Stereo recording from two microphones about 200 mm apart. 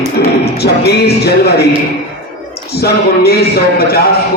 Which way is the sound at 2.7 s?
50° left (ahead or behind).